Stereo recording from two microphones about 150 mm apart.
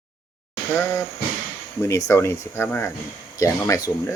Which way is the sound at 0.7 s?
15° left (ahead or behind).